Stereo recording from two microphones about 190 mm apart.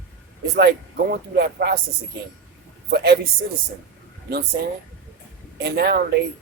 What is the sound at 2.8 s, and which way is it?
Speech, 60° right (ahead or behind).